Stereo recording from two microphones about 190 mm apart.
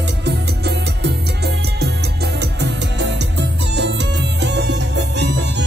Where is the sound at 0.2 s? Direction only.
60° right (ahead or behind).